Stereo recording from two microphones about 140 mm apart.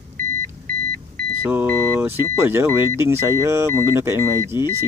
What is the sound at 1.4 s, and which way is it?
Speech, 15° right (ahead or behind).